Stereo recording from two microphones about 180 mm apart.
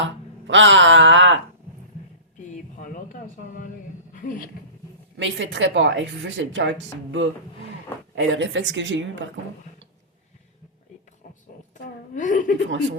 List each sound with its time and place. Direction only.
0.4 s speech: 90° right
2.5 s a sound: 45° left (ahead or behind)
4.1 s speech: 50° left (ahead or behind)
5.1 s speech: 90° right
12.1 s a woman's voice: 45° left (ahead or behind)